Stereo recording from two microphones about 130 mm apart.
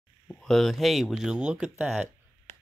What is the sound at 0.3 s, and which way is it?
Speech, 5° left (ahead or behind).